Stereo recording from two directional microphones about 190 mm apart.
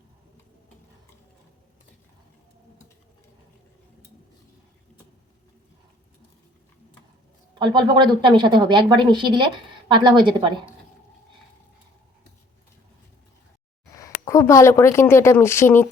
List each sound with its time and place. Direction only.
7.6 s a woman's voice: 25° right (ahead or behind)
13.9 s speech: 15° left (ahead or behind)